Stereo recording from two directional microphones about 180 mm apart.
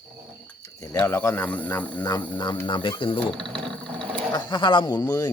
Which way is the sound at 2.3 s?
25° left (ahead or behind).